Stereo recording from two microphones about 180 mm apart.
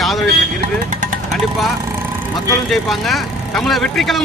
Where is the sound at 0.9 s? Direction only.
45° right (ahead or behind).